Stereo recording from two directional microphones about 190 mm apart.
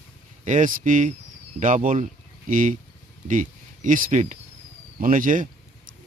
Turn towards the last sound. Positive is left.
turn(degrees=-45)  # may be behind; listen again after turning